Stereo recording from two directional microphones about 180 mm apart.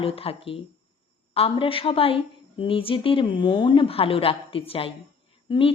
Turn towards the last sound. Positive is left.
turn(degrees=25)  # may be behind; listen again after turning